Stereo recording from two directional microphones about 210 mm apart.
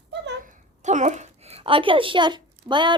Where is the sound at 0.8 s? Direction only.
35° right (ahead or behind).